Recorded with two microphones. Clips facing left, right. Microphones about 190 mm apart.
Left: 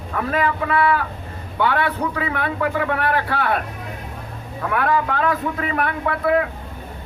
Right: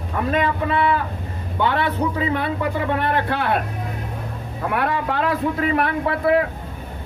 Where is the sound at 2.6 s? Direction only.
25° right (ahead or behind).